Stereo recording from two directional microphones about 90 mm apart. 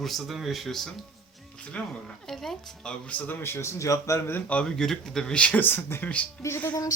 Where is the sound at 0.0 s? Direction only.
Centre (ahead or behind).